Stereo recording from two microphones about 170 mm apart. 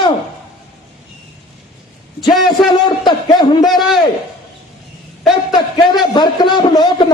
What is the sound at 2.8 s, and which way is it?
Speech, 25° left (ahead or behind).